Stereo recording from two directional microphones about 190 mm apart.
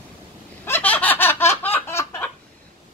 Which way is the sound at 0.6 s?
10° left (ahead or behind).